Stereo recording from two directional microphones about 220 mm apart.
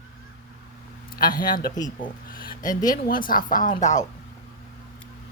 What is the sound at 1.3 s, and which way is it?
Speech, 40° left (ahead or behind).